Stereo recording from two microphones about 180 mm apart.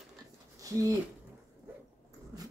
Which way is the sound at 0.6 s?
20° right (ahead or behind).